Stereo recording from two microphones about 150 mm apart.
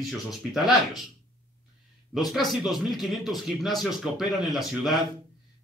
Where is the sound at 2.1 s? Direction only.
Centre (ahead or behind).